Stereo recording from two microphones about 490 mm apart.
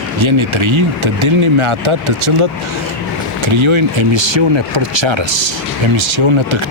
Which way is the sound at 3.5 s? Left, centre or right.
Right.